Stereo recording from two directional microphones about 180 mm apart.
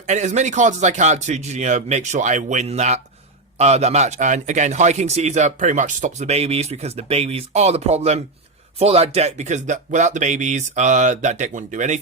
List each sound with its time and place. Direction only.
0.0 s a man's voice: 40° right (ahead or behind)